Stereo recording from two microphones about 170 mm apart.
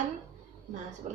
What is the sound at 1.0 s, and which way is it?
Speech, 50° right (ahead or behind).